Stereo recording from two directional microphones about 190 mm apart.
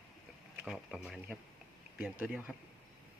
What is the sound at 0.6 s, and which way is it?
Speech, centre (ahead or behind).